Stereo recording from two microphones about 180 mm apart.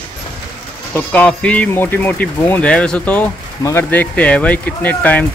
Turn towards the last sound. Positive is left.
turn(degrees=10)  # may be behind; listen again after turning